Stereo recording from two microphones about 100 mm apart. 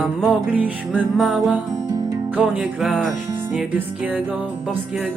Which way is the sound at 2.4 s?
5° right (ahead or behind).